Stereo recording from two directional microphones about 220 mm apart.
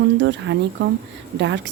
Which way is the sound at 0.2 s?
55° right (ahead or behind).